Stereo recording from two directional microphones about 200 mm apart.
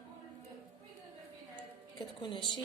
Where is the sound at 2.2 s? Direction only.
25° left (ahead or behind).